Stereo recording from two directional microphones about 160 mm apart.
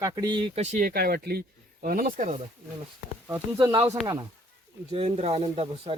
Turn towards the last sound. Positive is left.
turn(degrees=-40)  # may be behind; listen again after turning